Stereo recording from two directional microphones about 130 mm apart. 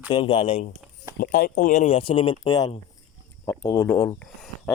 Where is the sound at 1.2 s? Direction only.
90° left; by 2.0 s 65° left (ahead or behind).